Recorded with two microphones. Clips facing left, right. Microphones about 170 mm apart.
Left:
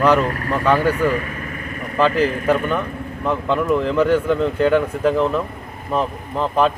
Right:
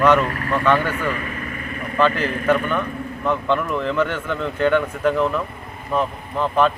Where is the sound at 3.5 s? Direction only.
35° left (ahead or behind).